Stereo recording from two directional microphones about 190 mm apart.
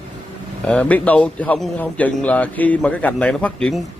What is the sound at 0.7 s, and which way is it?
A man's voice, 5° left (ahead or behind).